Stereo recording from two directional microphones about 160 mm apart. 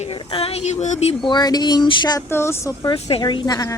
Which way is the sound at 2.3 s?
15° left (ahead or behind).